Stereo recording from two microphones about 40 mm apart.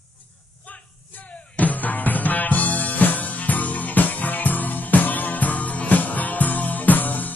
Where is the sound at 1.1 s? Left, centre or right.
Left.